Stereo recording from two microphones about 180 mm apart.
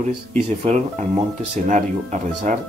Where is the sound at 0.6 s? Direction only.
40° right (ahead or behind).